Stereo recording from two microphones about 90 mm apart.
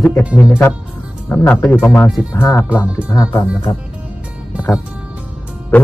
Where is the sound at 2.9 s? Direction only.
40° left (ahead or behind).